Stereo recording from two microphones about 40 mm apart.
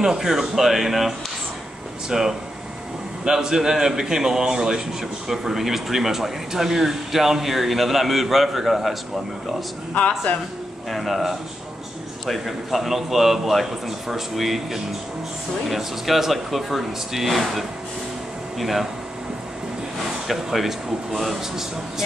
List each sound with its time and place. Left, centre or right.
0.0 s speech: centre
9.9 s speech: left
10.9 s a man's voice: centre
20.2 s speech: centre